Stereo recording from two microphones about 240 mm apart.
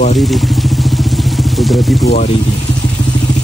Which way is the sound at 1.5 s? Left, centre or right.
Centre.